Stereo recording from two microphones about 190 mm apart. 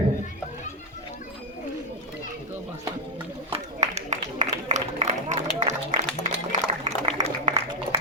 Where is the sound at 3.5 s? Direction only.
35° right (ahead or behind).